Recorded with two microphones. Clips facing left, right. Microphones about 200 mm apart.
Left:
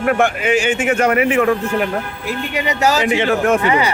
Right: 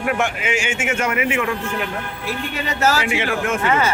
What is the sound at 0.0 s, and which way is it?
Speech, 50° left (ahead or behind).